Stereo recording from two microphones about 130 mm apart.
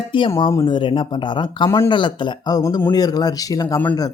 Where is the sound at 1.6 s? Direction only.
20° left (ahead or behind).